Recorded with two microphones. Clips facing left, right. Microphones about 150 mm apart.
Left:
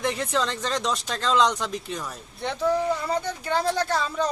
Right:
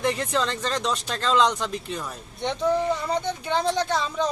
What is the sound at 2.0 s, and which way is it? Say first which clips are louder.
Speech: right 2 dB; centre (ahead or behind).